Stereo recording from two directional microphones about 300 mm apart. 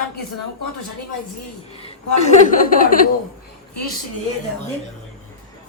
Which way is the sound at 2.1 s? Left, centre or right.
Left.